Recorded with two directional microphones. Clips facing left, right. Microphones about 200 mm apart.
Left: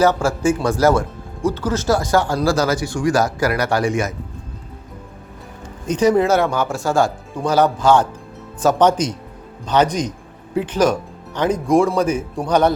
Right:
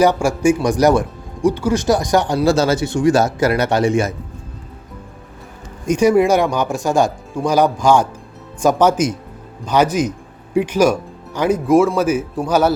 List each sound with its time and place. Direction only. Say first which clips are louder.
0.0 s speech: right 2 dB; 15° right (ahead or behind)
5.8 s speech: right 2 dB; 10° right (ahead or behind)